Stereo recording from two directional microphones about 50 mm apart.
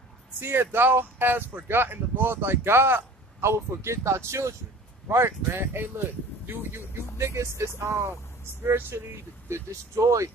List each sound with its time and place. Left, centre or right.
0.4 s speech: right
5.0 s speech: right
5.5 s speech: right
7.5 s speech: right
8.6 s speech: right
9.1 s speech: right